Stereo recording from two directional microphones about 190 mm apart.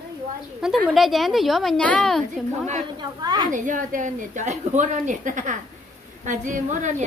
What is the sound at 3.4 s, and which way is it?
A woman's voice, 40° right (ahead or behind).